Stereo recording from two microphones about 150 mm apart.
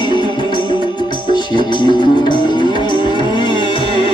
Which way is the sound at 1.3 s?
30° left (ahead or behind).